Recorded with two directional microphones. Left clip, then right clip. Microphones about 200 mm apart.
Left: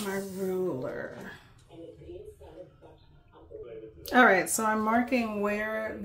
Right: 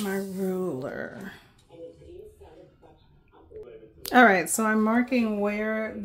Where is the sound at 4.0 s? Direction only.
50° right (ahead or behind); by 5.8 s 25° right (ahead or behind).